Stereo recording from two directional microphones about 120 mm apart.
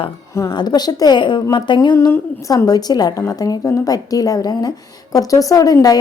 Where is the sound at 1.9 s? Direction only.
25° left (ahead or behind).